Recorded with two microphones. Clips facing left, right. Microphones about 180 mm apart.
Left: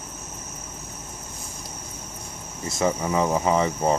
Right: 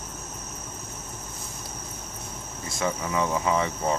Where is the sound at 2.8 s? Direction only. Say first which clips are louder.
Left 4 dB; 35° left (ahead or behind).